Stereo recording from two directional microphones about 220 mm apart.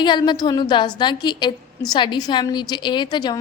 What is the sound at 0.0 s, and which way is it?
Speech, 20° left (ahead or behind).